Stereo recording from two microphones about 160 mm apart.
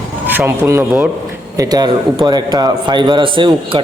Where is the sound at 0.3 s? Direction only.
15° right (ahead or behind).